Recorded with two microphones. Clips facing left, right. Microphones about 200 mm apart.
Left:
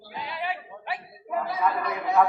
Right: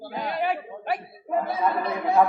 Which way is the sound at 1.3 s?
25° right (ahead or behind).